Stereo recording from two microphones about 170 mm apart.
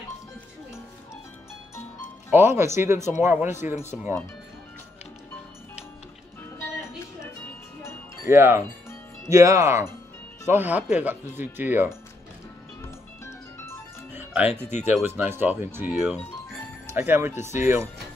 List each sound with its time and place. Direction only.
2.3 s speech: 15° right (ahead or behind)
8.3 s speech: 15° right (ahead or behind)
14.1 s music: 10° right (ahead or behind)
14.5 s speech: 40° left (ahead or behind)
15.0 s speech: 10° right (ahead or behind)